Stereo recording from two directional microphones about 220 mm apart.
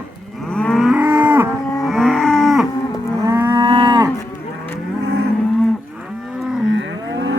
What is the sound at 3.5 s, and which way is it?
Moo, 20° right (ahead or behind).